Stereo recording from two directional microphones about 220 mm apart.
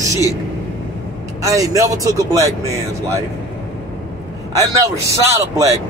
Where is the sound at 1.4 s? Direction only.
15° right (ahead or behind).